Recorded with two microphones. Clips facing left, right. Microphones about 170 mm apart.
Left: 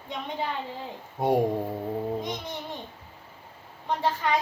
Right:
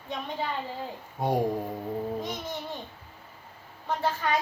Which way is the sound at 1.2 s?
25° left (ahead or behind).